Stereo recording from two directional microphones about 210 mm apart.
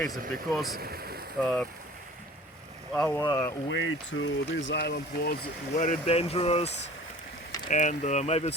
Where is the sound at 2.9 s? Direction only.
5° left (ahead or behind).